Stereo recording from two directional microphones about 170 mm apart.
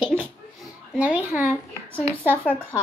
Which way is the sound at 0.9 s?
10° right (ahead or behind).